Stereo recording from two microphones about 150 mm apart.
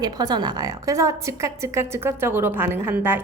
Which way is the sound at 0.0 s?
25° right (ahead or behind).